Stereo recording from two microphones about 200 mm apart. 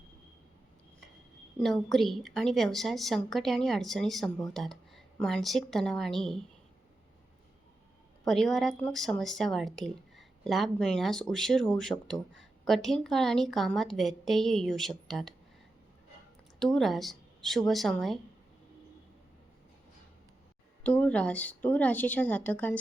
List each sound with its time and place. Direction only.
1.5 s a woman's voice: centre (ahead or behind)
4.5 s a sound: centre (ahead or behind)
5.2 s a woman's voice: centre (ahead or behind)
8.2 s a woman's voice: centre (ahead or behind)
16.6 s a woman's voice: centre (ahead or behind)
20.8 s a woman's voice: 10° left (ahead or behind)